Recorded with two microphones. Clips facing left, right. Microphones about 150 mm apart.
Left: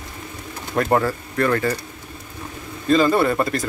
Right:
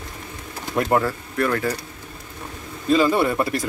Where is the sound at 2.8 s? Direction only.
10° right (ahead or behind).